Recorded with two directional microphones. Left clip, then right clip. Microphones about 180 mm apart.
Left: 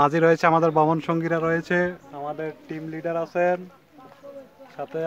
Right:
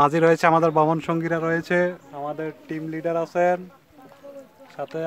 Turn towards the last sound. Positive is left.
turn(degrees=-30)  # may be behind; listen again after turning